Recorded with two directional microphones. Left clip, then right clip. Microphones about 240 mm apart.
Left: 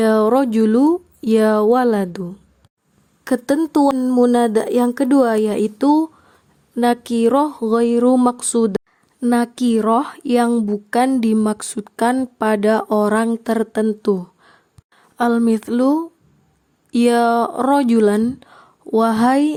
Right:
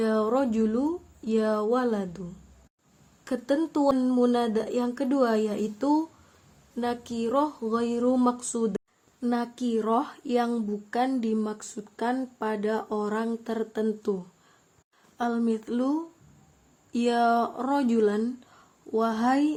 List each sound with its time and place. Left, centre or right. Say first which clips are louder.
0.0 s speech: left 10 dB; left
3.2 s a woman's voice: left 9 dB; left